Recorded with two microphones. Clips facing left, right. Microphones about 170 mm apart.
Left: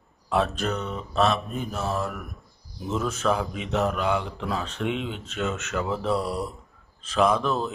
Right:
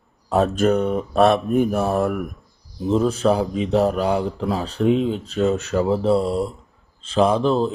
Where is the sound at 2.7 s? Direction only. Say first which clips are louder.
Right 9 dB; 30° right (ahead or behind).